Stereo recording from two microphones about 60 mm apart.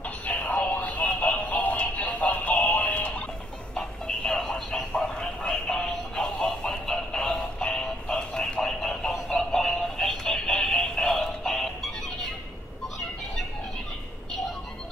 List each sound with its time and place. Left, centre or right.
0.0 s synthetic singing: left
3.7 s a sound: centre
9.3 s synthetic singing: centre